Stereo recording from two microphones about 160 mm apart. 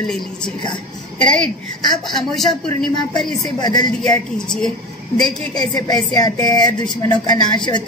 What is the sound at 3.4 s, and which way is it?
Speech, 25° left (ahead or behind).